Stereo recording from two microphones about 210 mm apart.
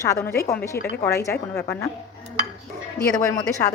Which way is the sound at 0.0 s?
15° left (ahead or behind).